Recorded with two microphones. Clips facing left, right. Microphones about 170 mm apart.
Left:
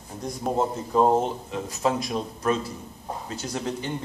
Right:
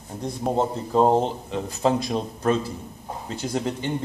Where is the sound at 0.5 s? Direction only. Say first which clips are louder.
Right 1 dB; 30° right (ahead or behind).